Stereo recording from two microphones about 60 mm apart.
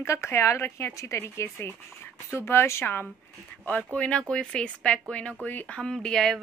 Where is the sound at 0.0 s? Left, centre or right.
Left.